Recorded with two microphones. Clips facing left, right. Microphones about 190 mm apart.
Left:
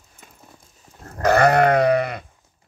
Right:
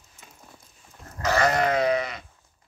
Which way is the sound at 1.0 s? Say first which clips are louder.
Left 7 dB; 55° left (ahead or behind).